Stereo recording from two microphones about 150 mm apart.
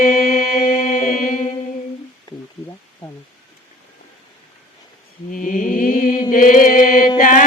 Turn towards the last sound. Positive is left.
turn(degrees=60)  # may be behind; listen again after turning